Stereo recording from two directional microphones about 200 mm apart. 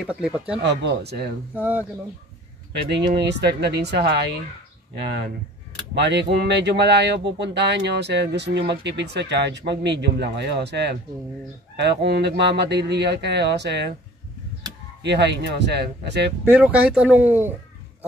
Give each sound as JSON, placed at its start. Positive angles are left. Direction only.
{"t": 0.0, "sound": "speech", "side_deg": -5}
{"t": 0.6, "sound": "speech", "side_deg": -60}
{"t": 1.5, "sound": "speech", "side_deg": -10}
{"t": 2.7, "sound": "speech", "side_deg": -60}
{"t": 5.9, "sound": "speech", "side_deg": -60}
{"t": 15.0, "sound": "speech", "side_deg": -60}
{"t": 16.4, "sound": "speech", "side_deg": -10}